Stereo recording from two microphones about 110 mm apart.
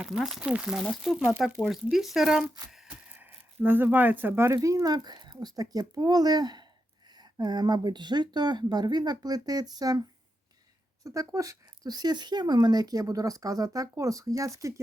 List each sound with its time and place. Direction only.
0.0 s speech: 5° right (ahead or behind)
3.1 s speech: 15° right (ahead or behind); by 10.0 s 35° right (ahead or behind)
11.0 s speech: 30° right (ahead or behind)